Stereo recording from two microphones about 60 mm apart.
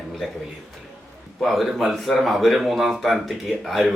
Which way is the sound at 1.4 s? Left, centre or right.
Centre.